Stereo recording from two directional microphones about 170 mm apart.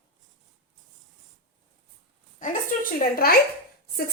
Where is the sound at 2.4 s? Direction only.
55° left (ahead or behind).